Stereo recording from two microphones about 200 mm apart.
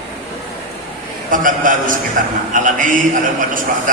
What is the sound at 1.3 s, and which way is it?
A man's voice, 40° right (ahead or behind).